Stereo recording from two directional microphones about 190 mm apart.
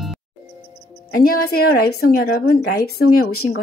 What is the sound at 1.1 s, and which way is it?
Speech, 50° left (ahead or behind).